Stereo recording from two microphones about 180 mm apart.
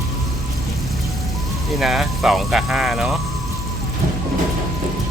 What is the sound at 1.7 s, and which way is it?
Speech, centre (ahead or behind).